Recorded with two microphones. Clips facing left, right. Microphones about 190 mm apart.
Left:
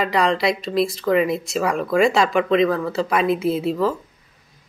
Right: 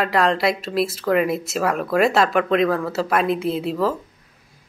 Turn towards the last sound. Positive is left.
turn(degrees=0)  # may be behind; listen again after turning